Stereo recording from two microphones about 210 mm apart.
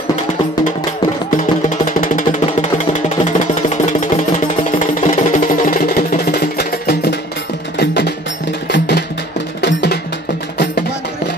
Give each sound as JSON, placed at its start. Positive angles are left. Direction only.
{"t": 2.0, "sound": "music", "side_deg": 40}